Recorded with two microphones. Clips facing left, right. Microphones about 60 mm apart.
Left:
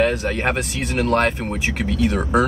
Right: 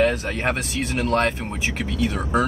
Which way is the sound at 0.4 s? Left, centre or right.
Left.